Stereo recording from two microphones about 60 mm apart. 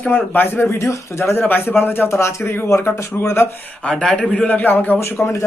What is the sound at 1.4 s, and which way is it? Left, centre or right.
Speech, left.